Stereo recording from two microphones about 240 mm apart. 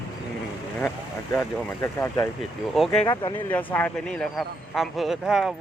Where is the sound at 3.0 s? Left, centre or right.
Centre.